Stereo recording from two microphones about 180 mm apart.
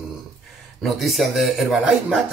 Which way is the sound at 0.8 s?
Centre (ahead or behind).